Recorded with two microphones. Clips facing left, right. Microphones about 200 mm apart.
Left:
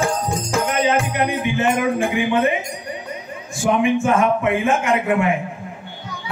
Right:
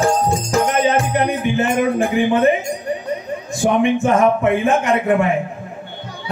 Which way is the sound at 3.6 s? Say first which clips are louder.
Right 2 dB; 35° right (ahead or behind).